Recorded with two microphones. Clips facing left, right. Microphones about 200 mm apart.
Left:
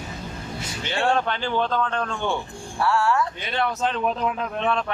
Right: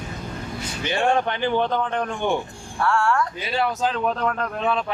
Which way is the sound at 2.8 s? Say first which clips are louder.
Even; 5° left (ahead or behind).